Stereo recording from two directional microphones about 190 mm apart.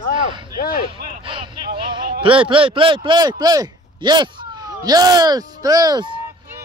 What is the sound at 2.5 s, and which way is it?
Speech, 25° right (ahead or behind).